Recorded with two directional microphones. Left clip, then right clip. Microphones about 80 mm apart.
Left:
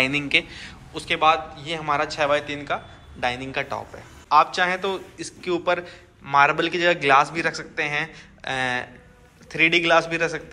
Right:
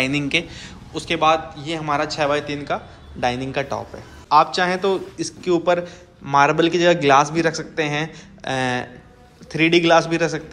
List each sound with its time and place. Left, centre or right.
0.0 s a man's voice: right